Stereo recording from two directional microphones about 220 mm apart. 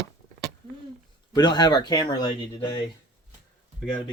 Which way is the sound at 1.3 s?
20° left (ahead or behind).